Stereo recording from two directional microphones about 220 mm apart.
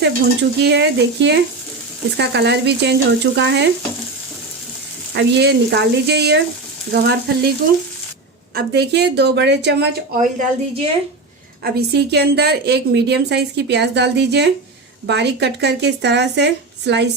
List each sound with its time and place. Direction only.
0.6 s a woman's voice: 50° right (ahead or behind)
5.1 s a woman's voice: 50° right (ahead or behind)
8.5 s a woman's voice: 50° right (ahead or behind)
10.2 s a woman's voice: 35° right (ahead or behind)
11.6 s a woman's voice: 50° right (ahead or behind)